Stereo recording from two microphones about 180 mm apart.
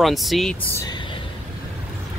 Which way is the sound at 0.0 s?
Centre (ahead or behind).